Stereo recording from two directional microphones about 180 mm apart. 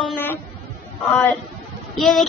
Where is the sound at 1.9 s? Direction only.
Centre (ahead or behind).